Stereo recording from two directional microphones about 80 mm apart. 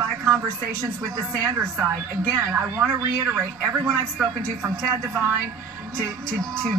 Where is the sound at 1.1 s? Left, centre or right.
Right.